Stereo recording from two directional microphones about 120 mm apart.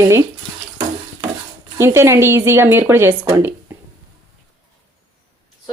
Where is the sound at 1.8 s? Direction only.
20° right (ahead or behind).